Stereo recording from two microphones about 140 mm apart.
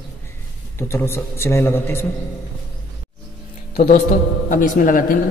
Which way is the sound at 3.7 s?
70° left (ahead or behind).